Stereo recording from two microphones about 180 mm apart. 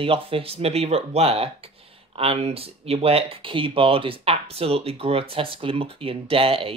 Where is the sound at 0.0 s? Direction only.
30° right (ahead or behind).